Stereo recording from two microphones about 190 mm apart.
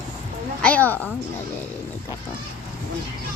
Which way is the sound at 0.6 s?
10° left (ahead or behind).